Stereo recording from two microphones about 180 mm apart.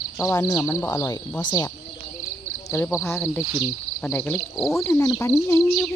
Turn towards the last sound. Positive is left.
turn(degrees=15)  # may be behind; listen again after turning